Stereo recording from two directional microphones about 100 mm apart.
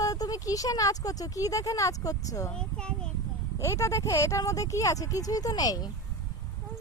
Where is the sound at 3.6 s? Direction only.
30° left (ahead or behind).